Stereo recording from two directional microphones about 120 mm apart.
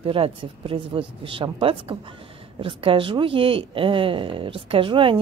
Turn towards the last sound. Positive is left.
turn(degrees=-45)  # may be behind; listen again after turning